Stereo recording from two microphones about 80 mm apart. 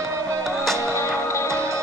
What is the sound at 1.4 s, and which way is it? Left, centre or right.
Music, right.